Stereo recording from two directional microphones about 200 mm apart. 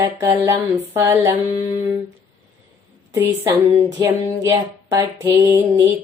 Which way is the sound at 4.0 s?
15° right (ahead or behind).